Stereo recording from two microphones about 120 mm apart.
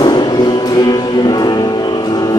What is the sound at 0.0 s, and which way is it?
Music, 35° left (ahead or behind).